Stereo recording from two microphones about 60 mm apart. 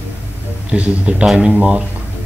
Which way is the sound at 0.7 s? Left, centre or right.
Centre.